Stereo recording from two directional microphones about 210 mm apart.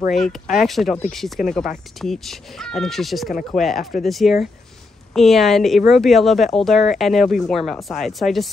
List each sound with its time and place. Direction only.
0.1 s a woman's voice: centre (ahead or behind)